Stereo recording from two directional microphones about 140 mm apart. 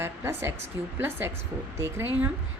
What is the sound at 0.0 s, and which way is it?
A woman's voice, 15° right (ahead or behind).